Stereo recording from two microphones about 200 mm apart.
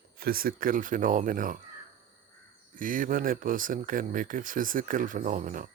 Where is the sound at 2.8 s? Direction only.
40° right (ahead or behind).